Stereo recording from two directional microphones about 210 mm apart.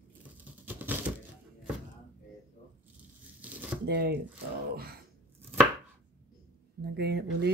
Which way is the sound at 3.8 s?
50° right (ahead or behind).